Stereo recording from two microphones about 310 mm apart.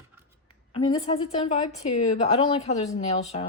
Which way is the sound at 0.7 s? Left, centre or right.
Centre.